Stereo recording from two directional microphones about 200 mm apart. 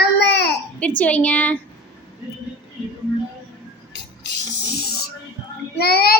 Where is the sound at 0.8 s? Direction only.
5° left (ahead or behind).